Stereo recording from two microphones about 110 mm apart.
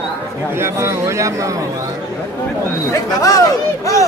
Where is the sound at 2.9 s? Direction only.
30° left (ahead or behind).